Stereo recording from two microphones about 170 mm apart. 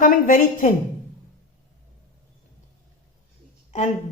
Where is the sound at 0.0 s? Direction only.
55° left (ahead or behind).